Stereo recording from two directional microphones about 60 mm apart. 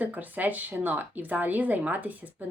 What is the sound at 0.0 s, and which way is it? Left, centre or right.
Speech, right.